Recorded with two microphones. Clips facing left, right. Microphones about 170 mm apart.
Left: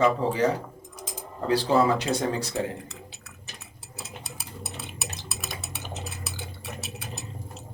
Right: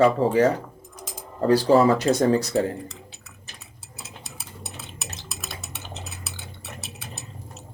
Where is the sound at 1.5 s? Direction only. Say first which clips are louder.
Right 5 dB; 40° right (ahead or behind).